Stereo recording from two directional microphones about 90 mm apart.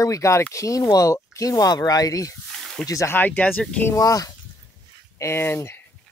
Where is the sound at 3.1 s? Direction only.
20° left (ahead or behind).